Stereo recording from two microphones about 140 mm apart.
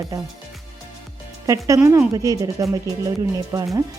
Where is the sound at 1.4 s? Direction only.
25° right (ahead or behind).